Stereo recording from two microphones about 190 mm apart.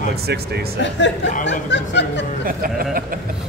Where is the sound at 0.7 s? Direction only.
70° left (ahead or behind).